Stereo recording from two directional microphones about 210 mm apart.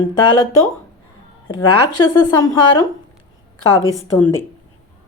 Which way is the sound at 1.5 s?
20° left (ahead or behind).